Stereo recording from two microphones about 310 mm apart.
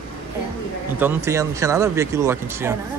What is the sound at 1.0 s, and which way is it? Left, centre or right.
Speech, centre.